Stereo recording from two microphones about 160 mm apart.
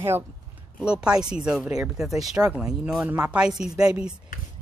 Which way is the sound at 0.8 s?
5° right (ahead or behind).